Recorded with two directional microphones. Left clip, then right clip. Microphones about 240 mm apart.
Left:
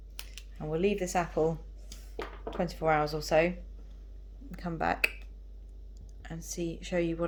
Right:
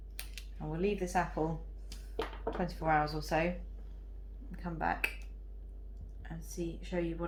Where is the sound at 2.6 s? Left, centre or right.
Left.